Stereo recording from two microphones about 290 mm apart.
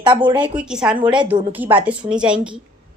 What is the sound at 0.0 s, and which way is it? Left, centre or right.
Speech, centre.